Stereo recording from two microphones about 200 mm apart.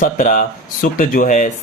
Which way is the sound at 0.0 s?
40° left (ahead or behind).